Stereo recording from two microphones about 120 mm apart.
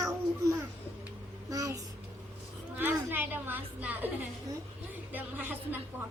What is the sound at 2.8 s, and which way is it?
A woman's voice, 15° right (ahead or behind).